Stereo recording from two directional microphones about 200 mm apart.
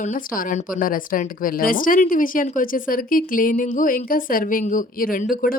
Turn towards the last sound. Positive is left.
turn(degrees=45)  # may be behind; listen again after turning